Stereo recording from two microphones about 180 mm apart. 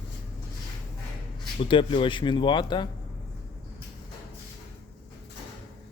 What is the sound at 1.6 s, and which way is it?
Speech, 30° left (ahead or behind).